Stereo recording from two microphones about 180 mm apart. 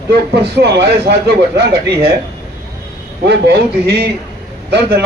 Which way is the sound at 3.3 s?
65° right (ahead or behind).